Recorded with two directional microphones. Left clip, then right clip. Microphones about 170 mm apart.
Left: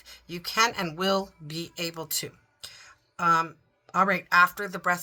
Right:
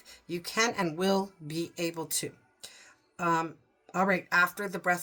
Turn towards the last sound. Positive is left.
turn(degrees=-15)  # may be behind; listen again after turning